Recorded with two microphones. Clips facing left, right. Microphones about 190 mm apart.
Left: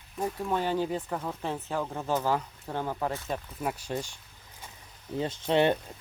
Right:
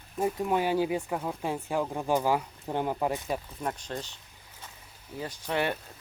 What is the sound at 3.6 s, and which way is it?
Speech, 5° left (ahead or behind).